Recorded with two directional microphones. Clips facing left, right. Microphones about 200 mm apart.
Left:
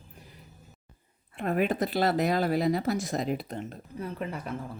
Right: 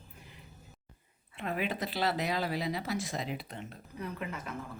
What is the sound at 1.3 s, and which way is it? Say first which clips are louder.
Speech: left 7 dB; 50° left (ahead or behind).